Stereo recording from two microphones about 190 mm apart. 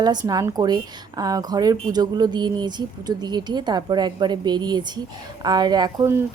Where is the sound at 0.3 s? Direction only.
20° right (ahead or behind).